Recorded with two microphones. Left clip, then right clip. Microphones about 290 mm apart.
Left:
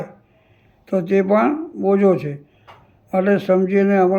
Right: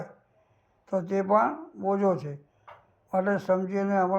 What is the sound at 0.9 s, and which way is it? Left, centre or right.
Speech, centre.